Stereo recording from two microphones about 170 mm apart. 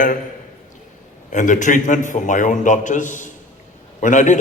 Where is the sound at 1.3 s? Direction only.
50° left (ahead or behind).